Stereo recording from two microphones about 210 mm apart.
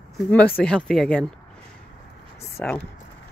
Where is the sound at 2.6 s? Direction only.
5° left (ahead or behind).